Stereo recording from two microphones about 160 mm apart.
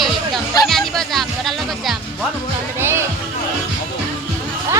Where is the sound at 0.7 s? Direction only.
Centre (ahead or behind).